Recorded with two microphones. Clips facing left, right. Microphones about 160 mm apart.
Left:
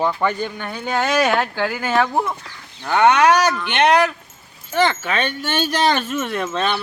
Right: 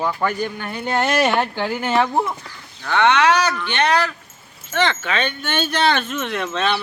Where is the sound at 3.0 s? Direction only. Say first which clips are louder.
Left 2 dB; 45° left (ahead or behind).